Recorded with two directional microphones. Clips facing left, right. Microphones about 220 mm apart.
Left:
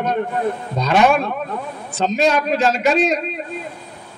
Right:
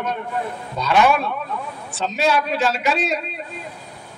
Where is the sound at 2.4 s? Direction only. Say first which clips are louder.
Left 4 dB; 40° left (ahead or behind).